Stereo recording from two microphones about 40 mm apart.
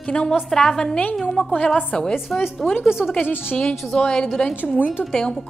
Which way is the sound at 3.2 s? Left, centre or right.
Left.